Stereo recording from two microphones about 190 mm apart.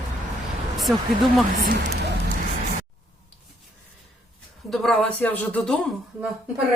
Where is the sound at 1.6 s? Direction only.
55° right (ahead or behind).